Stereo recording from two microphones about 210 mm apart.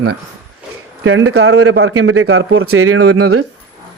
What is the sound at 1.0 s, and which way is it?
A man's voice, 75° right (ahead or behind).